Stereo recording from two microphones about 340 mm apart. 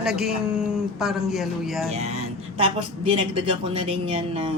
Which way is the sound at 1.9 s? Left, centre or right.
Centre.